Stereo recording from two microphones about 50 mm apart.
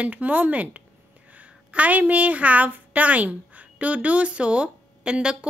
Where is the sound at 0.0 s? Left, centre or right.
Right.